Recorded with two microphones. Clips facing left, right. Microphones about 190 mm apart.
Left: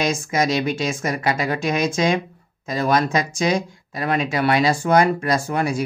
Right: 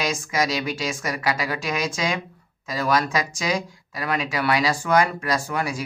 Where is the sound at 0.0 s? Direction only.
25° left (ahead or behind).